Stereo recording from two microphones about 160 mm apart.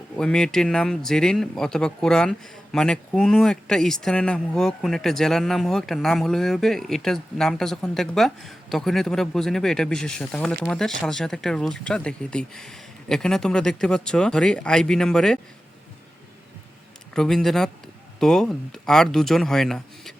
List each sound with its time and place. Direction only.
0.2 s speech: 5° left (ahead or behind)
17.2 s speech: 5° left (ahead or behind)